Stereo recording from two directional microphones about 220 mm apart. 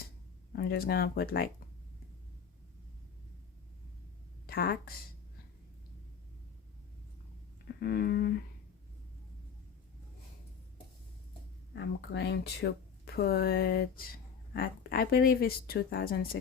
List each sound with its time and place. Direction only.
0.5 s speech: 45° left (ahead or behind)
4.4 s speech: 45° left (ahead or behind)
7.8 s speech: 45° left (ahead or behind)
11.7 s speech: 50° left (ahead or behind)